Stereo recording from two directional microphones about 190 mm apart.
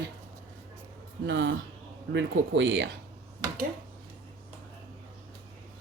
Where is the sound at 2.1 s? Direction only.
70° right (ahead or behind).